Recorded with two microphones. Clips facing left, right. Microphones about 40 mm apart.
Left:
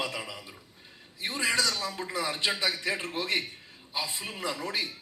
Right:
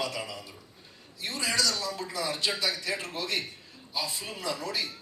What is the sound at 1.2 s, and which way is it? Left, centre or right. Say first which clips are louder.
Speech: left 2 dB; left.